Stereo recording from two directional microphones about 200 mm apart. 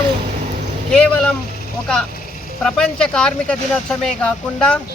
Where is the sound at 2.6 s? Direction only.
5° left (ahead or behind).